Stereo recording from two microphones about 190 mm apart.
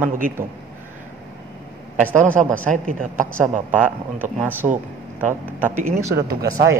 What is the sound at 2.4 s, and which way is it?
Speech, centre (ahead or behind).